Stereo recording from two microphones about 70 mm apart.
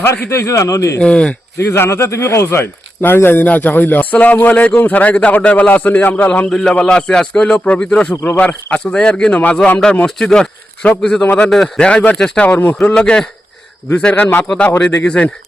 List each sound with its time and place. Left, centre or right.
0.3 s a man's voice: left
0.9 s a man's voice: centre
1.5 s speech: left
6.5 s a man's voice: centre
12.5 s speech: left
12.9 s a man's voice: centre